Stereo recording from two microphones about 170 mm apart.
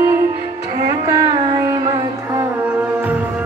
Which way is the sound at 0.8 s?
20° right (ahead or behind).